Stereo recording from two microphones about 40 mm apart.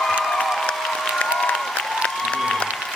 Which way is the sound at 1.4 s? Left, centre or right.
Centre.